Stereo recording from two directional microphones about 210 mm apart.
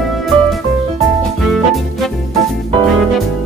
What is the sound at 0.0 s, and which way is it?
Music, centre (ahead or behind).